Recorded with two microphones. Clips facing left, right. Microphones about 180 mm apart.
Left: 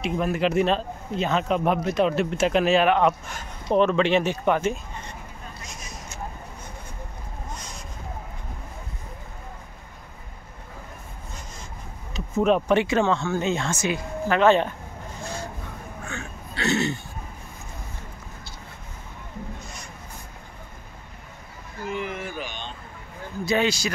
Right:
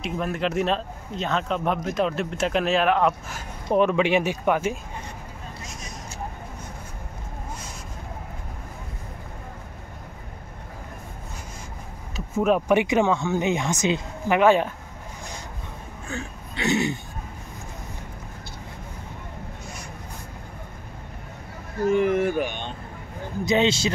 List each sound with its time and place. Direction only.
0.0 s speech: centre (ahead or behind)
12.4 s speech: 5° right (ahead or behind)
16.5 s speech: 15° right (ahead or behind)
21.8 s speech: 50° right (ahead or behind)
23.4 s speech: 20° right (ahead or behind)